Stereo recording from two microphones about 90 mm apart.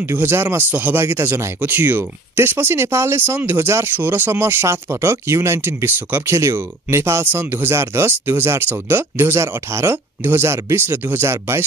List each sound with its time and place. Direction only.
0.0 s speech: 25° right (ahead or behind)